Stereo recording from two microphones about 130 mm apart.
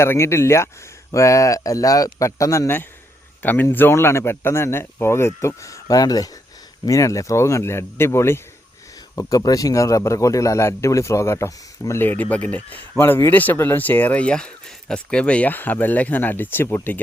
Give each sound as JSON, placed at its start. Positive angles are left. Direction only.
{"t": 0.0, "sound": "a man's voice", "side_deg": 20}